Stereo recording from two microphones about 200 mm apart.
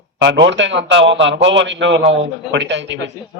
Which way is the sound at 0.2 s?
65° right (ahead or behind).